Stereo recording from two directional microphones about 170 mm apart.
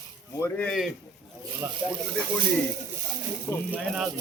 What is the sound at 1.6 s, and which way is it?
Speech, 15° right (ahead or behind).